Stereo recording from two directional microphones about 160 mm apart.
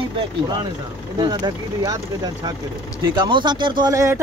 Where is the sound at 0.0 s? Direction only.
25° right (ahead or behind).